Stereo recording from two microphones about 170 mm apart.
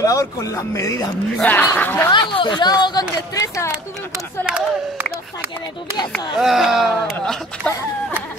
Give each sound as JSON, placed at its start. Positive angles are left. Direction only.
{"t": 0.0, "sound": "speech", "side_deg": 20}
{"t": 2.1, "sound": "speech", "side_deg": 25}
{"t": 4.5, "sound": "speech", "side_deg": -5}
{"t": 6.3, "sound": "speech", "side_deg": 0}